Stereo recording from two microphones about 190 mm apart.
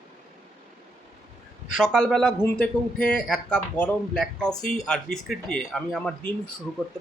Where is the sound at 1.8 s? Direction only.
Centre (ahead or behind).